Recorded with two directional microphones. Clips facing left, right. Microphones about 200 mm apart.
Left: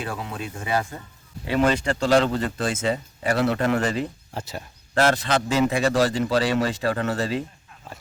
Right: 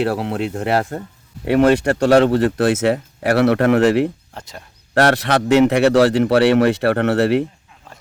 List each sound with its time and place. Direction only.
0.0 s speech: 70° right (ahead or behind)
4.4 s speech: 5° left (ahead or behind)
4.9 s speech: 70° right (ahead or behind)